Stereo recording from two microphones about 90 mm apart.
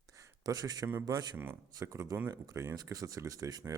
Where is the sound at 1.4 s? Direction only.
25° right (ahead or behind).